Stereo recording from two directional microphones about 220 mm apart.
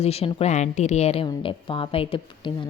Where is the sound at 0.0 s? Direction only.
25° left (ahead or behind).